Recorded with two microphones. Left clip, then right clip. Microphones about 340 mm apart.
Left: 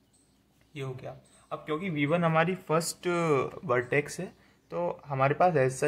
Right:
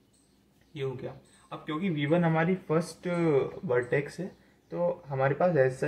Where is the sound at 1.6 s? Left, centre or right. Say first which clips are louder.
Left 1 dB; left.